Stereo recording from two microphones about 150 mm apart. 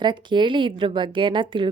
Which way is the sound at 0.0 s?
30° right (ahead or behind).